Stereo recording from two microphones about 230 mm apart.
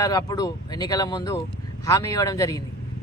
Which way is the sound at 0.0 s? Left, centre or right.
Centre.